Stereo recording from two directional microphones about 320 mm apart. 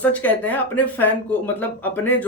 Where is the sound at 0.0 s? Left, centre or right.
Centre.